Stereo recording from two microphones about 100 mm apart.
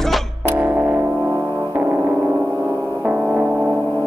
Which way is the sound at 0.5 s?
20° right (ahead or behind).